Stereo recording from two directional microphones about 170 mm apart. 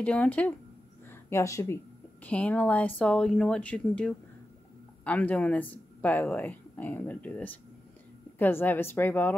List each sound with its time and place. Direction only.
0.0 s a woman's voice: 10° left (ahead or behind)